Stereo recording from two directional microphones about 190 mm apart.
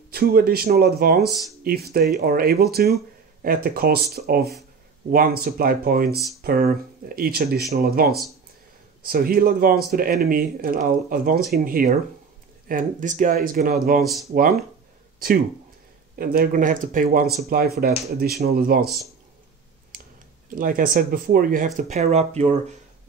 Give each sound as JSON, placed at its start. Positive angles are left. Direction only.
{"t": 0.1, "sound": "speech", "side_deg": -55}
{"t": 1.3, "sound": "speech", "side_deg": 0}
{"t": 1.6, "sound": "speech", "side_deg": -55}
{"t": 14.0, "sound": "speech", "side_deg": 0}
{"t": 14.3, "sound": "speech", "side_deg": -50}
{"t": 20.4, "sound": "speech", "side_deg": -45}